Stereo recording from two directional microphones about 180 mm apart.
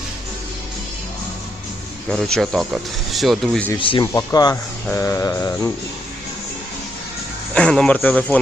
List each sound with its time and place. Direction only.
2.0 s speech: 5° left (ahead or behind)
3.8 s speech: 30° left (ahead or behind)
4.9 s mantra: 15° left (ahead or behind)
7.5 s speech: 5° left (ahead or behind)